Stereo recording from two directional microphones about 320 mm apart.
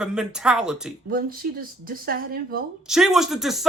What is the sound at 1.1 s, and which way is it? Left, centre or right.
Speech, right.